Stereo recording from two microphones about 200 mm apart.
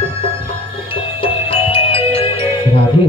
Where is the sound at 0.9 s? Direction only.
25° left (ahead or behind).